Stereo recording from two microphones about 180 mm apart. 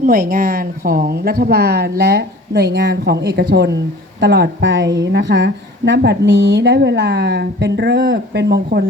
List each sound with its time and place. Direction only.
0.0 s a woman's voice: 50° right (ahead or behind)